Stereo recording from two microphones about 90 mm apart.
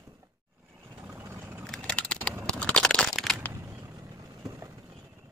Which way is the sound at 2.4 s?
10° left (ahead or behind).